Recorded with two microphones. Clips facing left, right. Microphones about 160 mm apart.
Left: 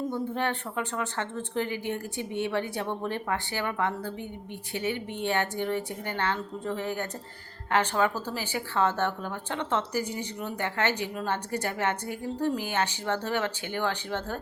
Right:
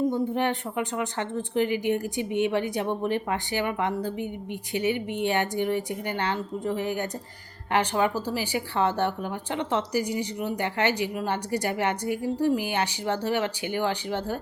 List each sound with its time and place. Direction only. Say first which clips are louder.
0.1 s speech: right 4 dB; 15° right (ahead or behind)